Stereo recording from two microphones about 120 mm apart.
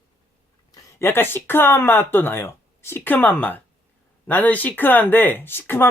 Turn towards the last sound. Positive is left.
turn(degrees=20)  # may be behind; listen again after turning